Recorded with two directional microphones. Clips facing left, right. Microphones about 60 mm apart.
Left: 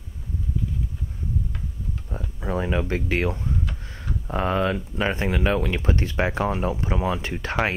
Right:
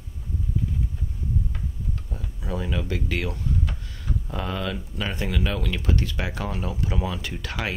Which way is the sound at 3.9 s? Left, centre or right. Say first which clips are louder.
Left 7 dB; left.